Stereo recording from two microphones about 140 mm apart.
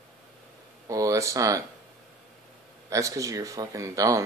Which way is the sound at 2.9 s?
25° right (ahead or behind).